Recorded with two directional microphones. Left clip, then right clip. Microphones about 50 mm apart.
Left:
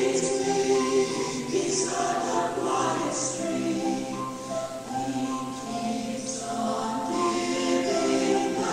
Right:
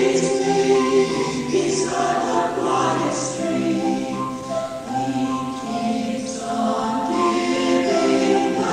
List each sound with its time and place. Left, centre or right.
0.0 s music: left
7.2 s music: left